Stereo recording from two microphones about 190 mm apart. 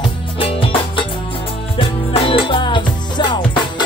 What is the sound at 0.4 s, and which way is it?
Music, 30° left (ahead or behind).